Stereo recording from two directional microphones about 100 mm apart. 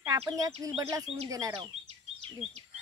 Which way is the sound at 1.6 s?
85° right.